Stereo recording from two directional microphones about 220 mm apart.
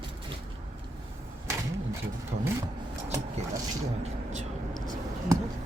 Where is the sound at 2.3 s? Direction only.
45° right (ahead or behind).